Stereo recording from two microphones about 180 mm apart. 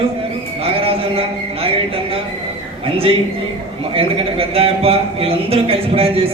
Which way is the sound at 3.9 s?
30° right (ahead or behind).